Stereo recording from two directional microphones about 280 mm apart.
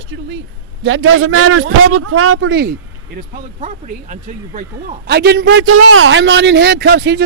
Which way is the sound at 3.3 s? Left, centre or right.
Right.